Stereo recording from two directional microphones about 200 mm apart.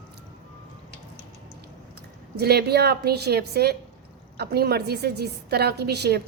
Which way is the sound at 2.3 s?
55° right (ahead or behind).